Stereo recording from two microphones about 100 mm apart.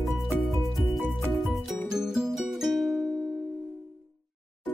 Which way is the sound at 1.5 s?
5° right (ahead or behind).